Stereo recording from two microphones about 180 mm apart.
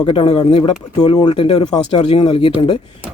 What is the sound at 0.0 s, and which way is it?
Speech, 30° left (ahead or behind).